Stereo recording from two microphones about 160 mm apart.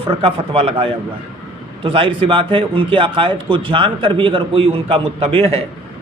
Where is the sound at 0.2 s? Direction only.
35° right (ahead or behind).